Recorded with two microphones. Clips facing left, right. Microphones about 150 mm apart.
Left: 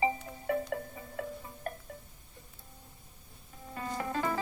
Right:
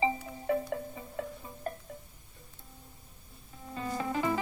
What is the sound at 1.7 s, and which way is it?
Music, 25° right (ahead or behind).